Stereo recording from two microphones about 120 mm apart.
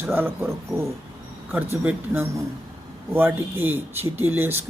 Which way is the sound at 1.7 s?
20° right (ahead or behind).